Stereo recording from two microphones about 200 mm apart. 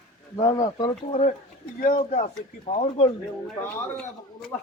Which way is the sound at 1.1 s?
30° left (ahead or behind).